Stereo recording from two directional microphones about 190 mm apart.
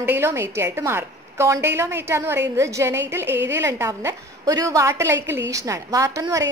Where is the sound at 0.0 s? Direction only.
10° right (ahead or behind).